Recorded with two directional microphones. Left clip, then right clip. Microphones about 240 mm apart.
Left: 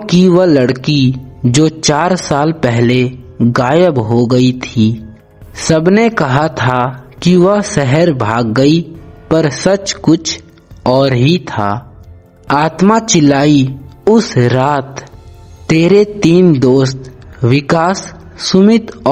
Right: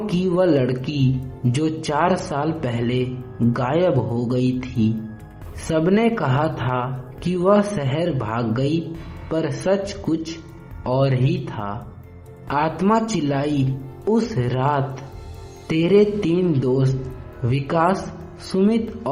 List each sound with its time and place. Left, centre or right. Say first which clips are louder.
0.0 s speech: left 10 dB; left